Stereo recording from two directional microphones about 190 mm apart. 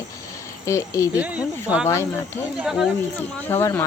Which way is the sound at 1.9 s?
15° left (ahead or behind).